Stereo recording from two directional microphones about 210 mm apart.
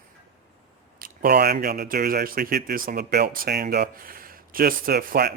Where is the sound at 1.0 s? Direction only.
45° right (ahead or behind).